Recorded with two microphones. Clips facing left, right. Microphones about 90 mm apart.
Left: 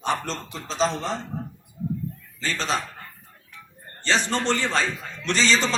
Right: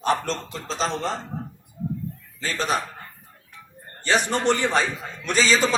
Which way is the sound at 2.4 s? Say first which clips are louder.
Right 2 dB; 10° right (ahead or behind).